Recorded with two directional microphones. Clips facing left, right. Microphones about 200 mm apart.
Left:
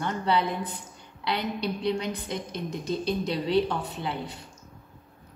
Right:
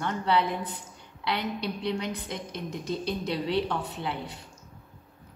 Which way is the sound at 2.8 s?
5° right (ahead or behind).